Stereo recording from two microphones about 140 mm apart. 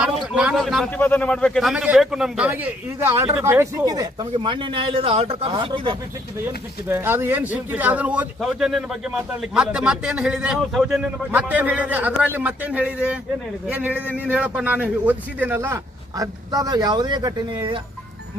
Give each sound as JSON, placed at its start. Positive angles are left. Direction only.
{"t": 0.0, "sound": "a sound", "side_deg": -5}
{"t": 0.9, "sound": "a man's voice", "side_deg": 15}
{"t": 6.8, "sound": "a man's voice", "side_deg": -15}